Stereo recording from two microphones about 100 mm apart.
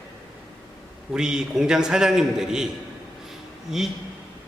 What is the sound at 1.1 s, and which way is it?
A man's voice, 5° right (ahead or behind).